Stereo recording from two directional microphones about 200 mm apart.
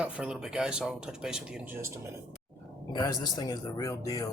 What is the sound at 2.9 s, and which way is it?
Speech, 20° left (ahead or behind).